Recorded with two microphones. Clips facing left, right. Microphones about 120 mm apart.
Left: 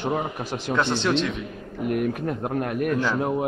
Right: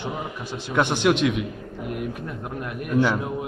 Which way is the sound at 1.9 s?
55° left (ahead or behind).